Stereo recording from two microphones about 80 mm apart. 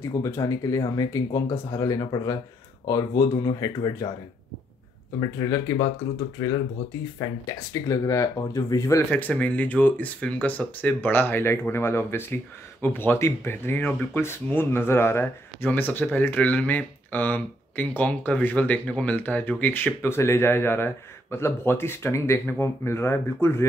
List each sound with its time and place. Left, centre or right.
0.1 s speech: left
5.2 s speech: left
7.2 s speech: left
9.1 s speech: centre